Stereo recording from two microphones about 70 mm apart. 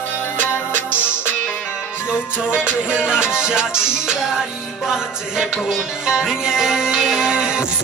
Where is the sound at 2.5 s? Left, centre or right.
Centre.